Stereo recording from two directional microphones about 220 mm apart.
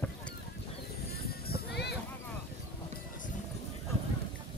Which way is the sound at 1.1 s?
45° left (ahead or behind).